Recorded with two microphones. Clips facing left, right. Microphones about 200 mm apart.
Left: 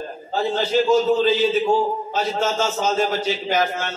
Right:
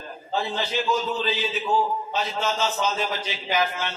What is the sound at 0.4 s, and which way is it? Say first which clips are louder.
A man's voice: left 8 dB; 45° left (ahead or behind).